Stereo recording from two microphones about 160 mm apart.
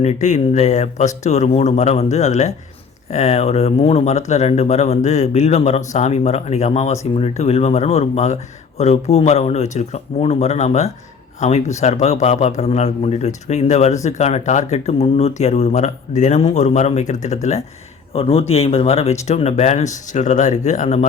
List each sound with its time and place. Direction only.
0.0 s a man's voice: 45° left (ahead or behind)